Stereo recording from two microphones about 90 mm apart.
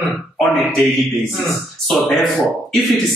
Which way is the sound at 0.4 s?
5° left (ahead or behind).